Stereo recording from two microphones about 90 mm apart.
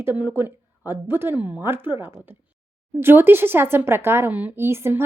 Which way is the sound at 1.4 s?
15° right (ahead or behind).